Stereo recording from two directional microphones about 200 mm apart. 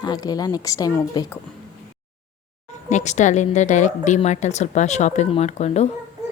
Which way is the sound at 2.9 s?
35° left (ahead or behind).